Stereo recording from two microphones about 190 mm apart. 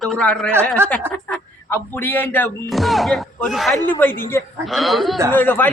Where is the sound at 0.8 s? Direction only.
10° right (ahead or behind).